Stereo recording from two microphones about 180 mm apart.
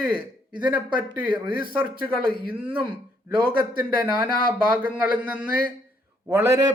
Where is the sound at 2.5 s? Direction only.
10° right (ahead or behind).